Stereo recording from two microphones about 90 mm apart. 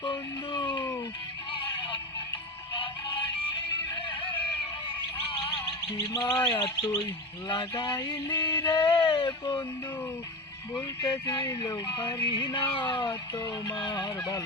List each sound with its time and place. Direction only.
0.0 s a sound: 60° left (ahead or behind)
2.7 s synthetic singing: 60° left (ahead or behind)
3.7 s music: 60° left (ahead or behind)
5.4 s music: 85° left
5.6 s music: 50° left (ahead or behind)
6.4 s bird: 60° left (ahead or behind)
7.4 s fowl: 60° left (ahead or behind)
9.0 s a sound: 60° left (ahead or behind)
11.0 s fowl: 55° left (ahead or behind)
11.4 s fowl: 40° left (ahead or behind)